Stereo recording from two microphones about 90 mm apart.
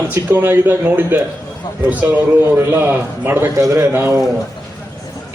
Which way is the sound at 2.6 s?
25° right (ahead or behind).